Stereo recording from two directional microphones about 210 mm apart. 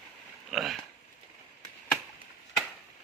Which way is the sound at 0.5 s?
Centre (ahead or behind).